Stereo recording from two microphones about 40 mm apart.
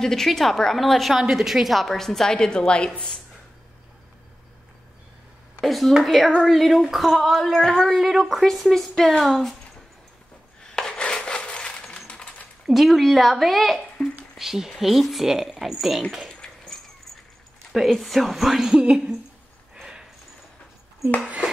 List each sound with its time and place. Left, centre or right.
0.0 s a woman's voice: centre
1.3 s a woman's voice: centre; by 2.9 s left
5.6 s a woman's voice: centre
10.6 s a sound: centre
12.6 s a woman's voice: centre
14.0 s speech: centre
14.3 s a woman's voice: centre
16.2 s a sound: centre
17.7 s a woman's voice: centre; by 19.1 s right
19.8 s a sound: centre